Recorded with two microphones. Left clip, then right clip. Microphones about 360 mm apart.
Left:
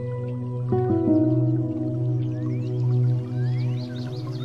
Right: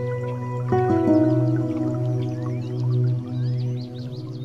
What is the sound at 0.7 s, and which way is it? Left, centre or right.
Music, right.